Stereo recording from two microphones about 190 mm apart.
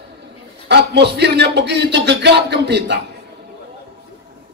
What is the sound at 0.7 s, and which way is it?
A man's voice, 60° right (ahead or behind).